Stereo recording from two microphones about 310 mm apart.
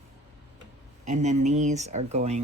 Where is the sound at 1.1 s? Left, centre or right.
Right.